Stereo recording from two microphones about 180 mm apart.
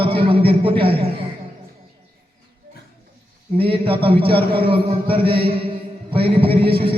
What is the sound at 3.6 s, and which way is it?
A man's voice, 30° right (ahead or behind).